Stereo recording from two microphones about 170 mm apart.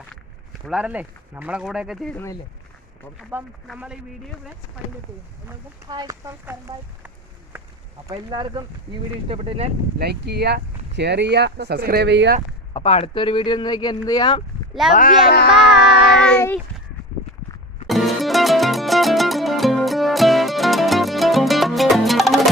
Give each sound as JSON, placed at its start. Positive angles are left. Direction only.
{"t": 0.7, "sound": "speech", "side_deg": -5}
{"t": 3.2, "sound": "speech", "side_deg": -5}
{"t": 5.9, "sound": "speech", "side_deg": -25}
{"t": 6.4, "sound": "speech", "side_deg": -10}
{"t": 7.5, "sound": "a sound", "side_deg": -10}
{"t": 8.1, "sound": "speech", "side_deg": -30}
{"t": 10.0, "sound": "speech", "side_deg": -70}
{"t": 12.7, "sound": "speech", "side_deg": 35}
{"t": 14.8, "sound": "speech", "side_deg": 0}
{"t": 15.3, "sound": "music", "side_deg": 75}
{"t": 16.2, "sound": "speech", "side_deg": 10}
{"t": 17.8, "sound": "music", "side_deg": 0}